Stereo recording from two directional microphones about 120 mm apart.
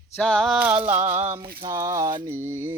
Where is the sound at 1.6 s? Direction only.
30° right (ahead or behind).